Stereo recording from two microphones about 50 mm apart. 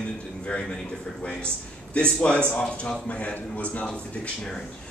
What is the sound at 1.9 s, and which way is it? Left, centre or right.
Speech, left.